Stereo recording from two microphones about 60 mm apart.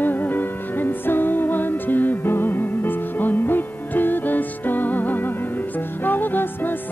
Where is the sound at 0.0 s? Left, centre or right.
Left.